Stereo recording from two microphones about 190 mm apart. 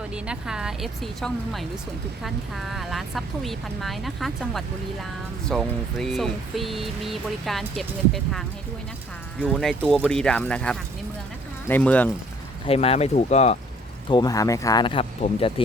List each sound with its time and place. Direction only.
0.1 s speech: 5° right (ahead or behind)
12.6 s speech: 30° left (ahead or behind)
14.1 s speech: 20° left (ahead or behind)